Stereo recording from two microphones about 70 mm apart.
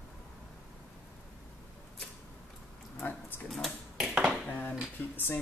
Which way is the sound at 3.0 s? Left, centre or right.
Left.